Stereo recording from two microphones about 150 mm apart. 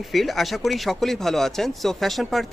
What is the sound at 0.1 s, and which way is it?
Speech, centre (ahead or behind).